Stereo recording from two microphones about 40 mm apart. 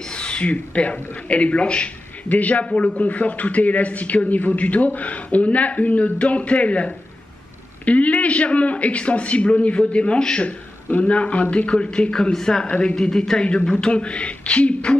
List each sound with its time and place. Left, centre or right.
0.1 s speech: left
2.2 s a man's voice: left
2.6 s a man's voice: left
12.6 s speech: left
12.9 s speech: centre